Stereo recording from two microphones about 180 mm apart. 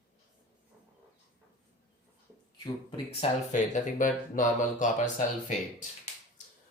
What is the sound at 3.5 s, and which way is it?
Speech, 45° left (ahead or behind).